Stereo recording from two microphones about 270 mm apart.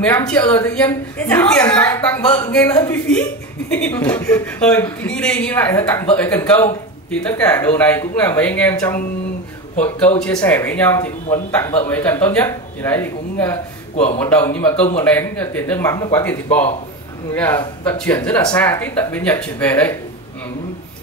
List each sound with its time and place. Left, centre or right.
0.0 s a woman's voice: centre
13.9 s a man's voice: left
14.2 s a woman's voice: centre